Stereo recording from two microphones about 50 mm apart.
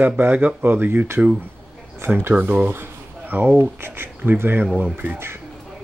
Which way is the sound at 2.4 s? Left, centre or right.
Right.